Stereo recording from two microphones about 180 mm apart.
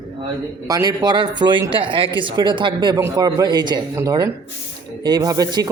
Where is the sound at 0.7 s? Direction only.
20° right (ahead or behind).